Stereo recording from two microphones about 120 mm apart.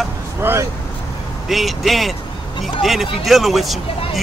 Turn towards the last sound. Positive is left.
turn(degrees=0)  # may be behind; listen again after turning